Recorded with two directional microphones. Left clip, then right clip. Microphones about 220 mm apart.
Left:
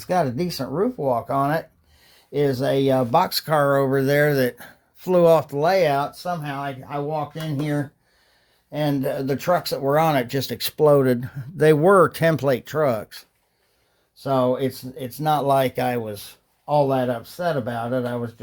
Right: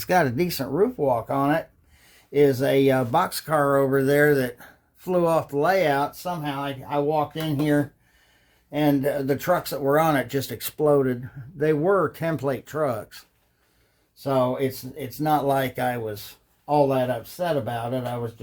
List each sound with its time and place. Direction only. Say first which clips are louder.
0.0 s speech: right 1 dB; centre (ahead or behind)
1.0 s speech: left 1 dB; 20° left (ahead or behind); by 7.9 s 5° left (ahead or behind)
8.7 s speech: right 1 dB; 20° left (ahead or behind)